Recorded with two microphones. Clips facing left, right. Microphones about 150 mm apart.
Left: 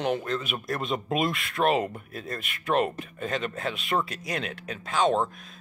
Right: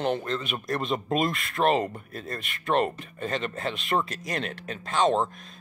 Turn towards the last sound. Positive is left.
turn(degrees=0)  # may be behind; listen again after turning